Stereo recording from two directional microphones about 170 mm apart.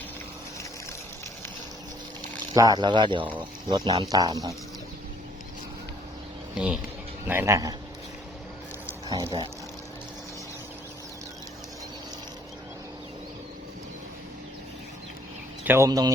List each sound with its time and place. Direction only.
2.5 s speech: 25° right (ahead or behind)
7.3 s speech: 15° right (ahead or behind)
9.0 s speech: 20° right (ahead or behind)
15.6 s speech: 15° right (ahead or behind)